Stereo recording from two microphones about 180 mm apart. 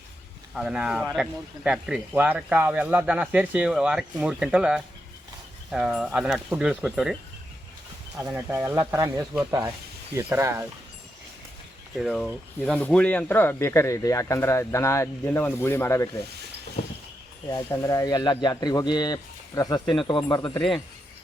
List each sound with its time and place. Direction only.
0.5 s speech: 5° right (ahead or behind)
8.2 s speech: 10° right (ahead or behind)
11.9 s speech: centre (ahead or behind)
17.5 s speech: 20° left (ahead or behind)
19.8 s speech: 5° left (ahead or behind)
20.1 s speech: 25° left (ahead or behind)